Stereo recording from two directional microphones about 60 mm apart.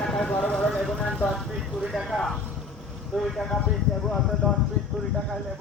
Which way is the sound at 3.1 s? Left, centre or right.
Centre.